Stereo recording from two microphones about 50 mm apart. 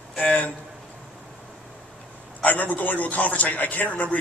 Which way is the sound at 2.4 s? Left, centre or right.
Left.